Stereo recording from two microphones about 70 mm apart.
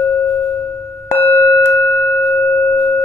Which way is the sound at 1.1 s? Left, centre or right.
Left.